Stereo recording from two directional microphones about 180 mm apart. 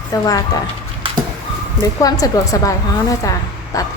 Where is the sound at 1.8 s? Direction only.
20° left (ahead or behind).